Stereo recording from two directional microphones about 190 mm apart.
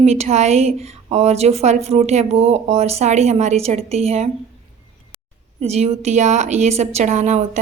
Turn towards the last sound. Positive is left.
turn(degrees=-35)  # may be behind; listen again after turning